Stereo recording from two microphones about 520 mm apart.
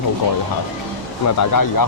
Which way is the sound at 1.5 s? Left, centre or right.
Left.